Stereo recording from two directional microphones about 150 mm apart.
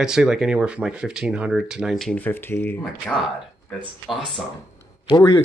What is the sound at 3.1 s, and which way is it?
Speech, centre (ahead or behind).